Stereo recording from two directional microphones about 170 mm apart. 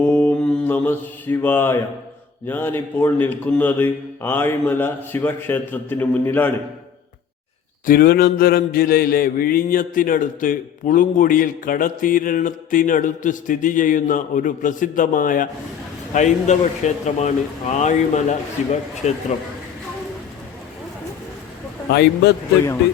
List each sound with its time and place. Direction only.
0.0 s mantra: 10° left (ahead or behind)
2.5 s speech: 10° left (ahead or behind)
7.9 s mantra: 60° left (ahead or behind); by 18.3 s 45° left (ahead or behind)
19.0 s speech: 40° left (ahead or behind)